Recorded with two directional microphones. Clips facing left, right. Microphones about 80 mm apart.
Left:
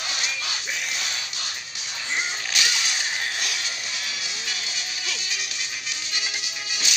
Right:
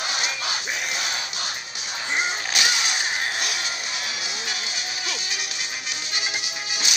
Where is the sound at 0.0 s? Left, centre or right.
Centre.